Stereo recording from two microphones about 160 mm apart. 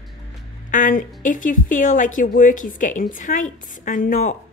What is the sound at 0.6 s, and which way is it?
A woman's voice, 55° left (ahead or behind).